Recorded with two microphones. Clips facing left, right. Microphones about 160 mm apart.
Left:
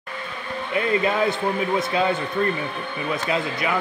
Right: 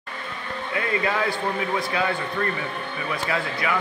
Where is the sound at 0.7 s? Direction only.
20° left (ahead or behind).